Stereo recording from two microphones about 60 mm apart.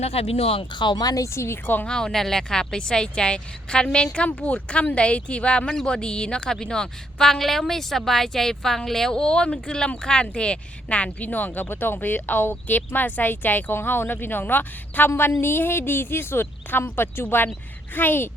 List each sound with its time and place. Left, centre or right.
0.9 s a woman's voice: left
1.3 s a woman's voice: left
1.6 s speech: left
1.9 s speech: centre; by 18.3 s left